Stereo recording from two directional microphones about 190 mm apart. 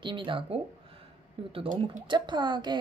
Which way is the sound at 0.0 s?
25° right (ahead or behind).